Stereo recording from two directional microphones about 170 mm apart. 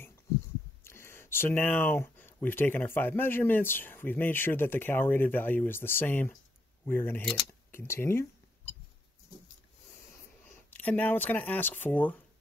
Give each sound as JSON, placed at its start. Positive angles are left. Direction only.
{"t": 0.8, "sound": "speech", "side_deg": 15}
{"t": 7.7, "sound": "a sound", "side_deg": 15}
{"t": 10.7, "sound": "speech", "side_deg": 10}